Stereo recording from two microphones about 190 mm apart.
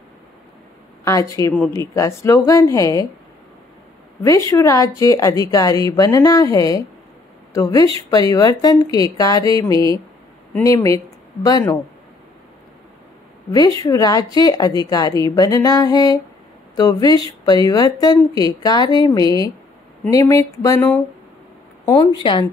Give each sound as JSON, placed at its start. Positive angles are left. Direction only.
{"t": 1.0, "sound": "a woman's voice", "side_deg": 15}
{"t": 4.2, "sound": "a woman's voice", "side_deg": 15}
{"t": 13.5, "sound": "a woman's voice", "side_deg": 20}